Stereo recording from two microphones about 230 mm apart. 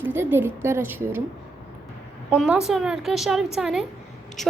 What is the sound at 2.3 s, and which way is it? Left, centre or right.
A woman's voice, centre.